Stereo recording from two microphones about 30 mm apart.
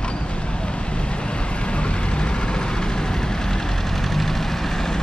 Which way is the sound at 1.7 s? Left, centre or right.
Left.